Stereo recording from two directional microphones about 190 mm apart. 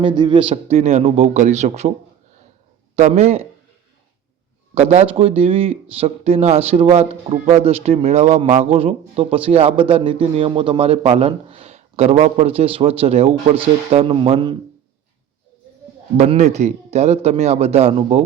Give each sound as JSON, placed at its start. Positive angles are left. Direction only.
{"t": 0.0, "sound": "speech", "side_deg": -25}
{"t": 2.9, "sound": "speech", "side_deg": -35}
{"t": 4.7, "sound": "speech", "side_deg": -35}
{"t": 16.1, "sound": "speech", "side_deg": -35}